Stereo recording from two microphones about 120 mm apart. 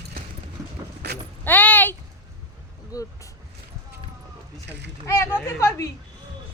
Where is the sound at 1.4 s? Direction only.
15° left (ahead or behind).